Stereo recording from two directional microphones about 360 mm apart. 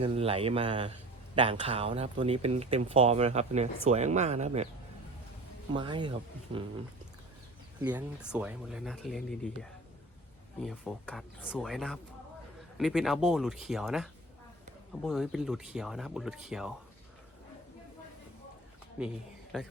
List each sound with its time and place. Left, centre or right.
0.0 s speech: centre
5.7 s speech: centre
7.8 s speech: centre
19.0 s speech: centre